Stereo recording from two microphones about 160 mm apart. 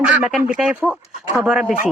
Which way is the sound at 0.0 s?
5° right (ahead or behind).